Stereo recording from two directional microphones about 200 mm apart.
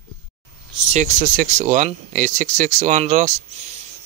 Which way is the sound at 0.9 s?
40° right (ahead or behind).